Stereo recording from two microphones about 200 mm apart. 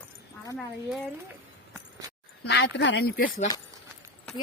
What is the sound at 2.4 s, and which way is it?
Speech, 60° left (ahead or behind).